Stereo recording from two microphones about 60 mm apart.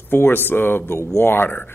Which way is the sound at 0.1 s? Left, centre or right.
Left.